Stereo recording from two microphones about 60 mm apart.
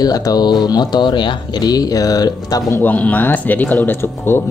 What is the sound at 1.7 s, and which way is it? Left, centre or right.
Speech, left.